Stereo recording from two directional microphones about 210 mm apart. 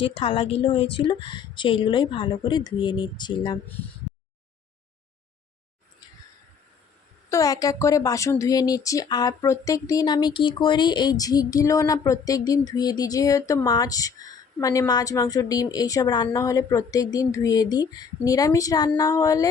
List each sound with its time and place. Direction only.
0.0 s speech: 25° left (ahead or behind)
7.3 s a woman's voice: 15° left (ahead or behind)